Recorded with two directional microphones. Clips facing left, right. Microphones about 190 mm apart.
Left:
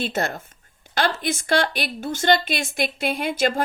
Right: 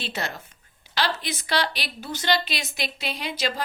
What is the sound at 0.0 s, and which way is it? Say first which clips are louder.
A woman's voice: left 7 dB; 50° left (ahead or behind).